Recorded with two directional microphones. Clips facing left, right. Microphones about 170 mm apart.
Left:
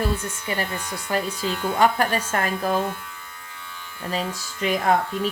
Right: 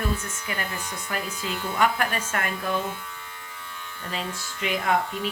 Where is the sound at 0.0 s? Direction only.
30° left (ahead or behind).